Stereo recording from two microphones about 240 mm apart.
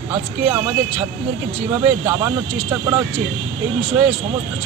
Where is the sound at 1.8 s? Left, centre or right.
Centre.